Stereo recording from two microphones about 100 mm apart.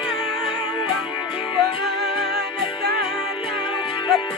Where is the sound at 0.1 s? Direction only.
55° left (ahead or behind).